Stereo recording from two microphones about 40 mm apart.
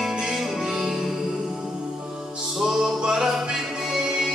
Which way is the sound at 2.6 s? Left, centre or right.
Centre.